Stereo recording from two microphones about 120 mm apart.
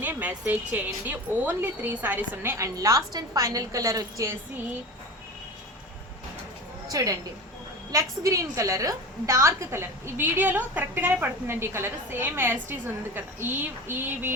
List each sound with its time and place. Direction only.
0.0 s a woman's voice: 15° right (ahead or behind)
6.8 s a woman's voice: 30° right (ahead or behind)